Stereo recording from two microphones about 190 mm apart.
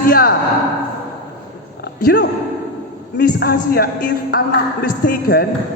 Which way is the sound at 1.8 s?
55° left (ahead or behind).